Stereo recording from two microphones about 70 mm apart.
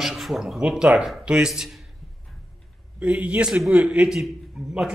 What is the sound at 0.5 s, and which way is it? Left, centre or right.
Speech, centre.